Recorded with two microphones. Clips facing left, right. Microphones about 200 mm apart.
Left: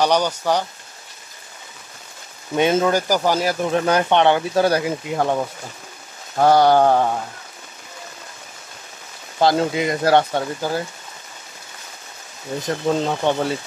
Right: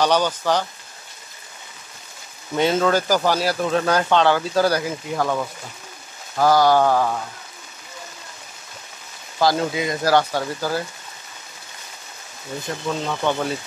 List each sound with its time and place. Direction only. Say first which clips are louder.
0.0 s speech: left 1 dB; 15° left (ahead or behind)
2.5 s speech: left 1 dB; 15° left (ahead or behind)
9.4 s speech: left 2 dB; 25° left (ahead or behind)
12.6 s speech: left 6 dB; 35° left (ahead or behind)